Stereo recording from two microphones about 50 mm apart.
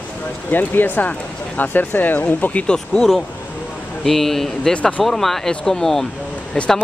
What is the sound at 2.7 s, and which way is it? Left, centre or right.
Speech, centre.